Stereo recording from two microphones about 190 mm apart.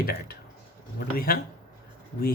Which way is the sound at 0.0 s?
50° left (ahead or behind).